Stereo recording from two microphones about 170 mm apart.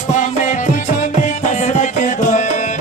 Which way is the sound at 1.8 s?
45° left (ahead or behind).